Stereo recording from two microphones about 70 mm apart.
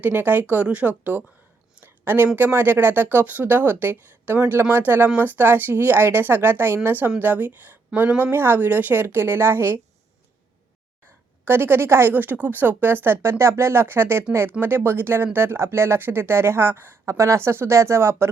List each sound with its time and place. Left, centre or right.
0.0 s speech: right
11.4 s speech: right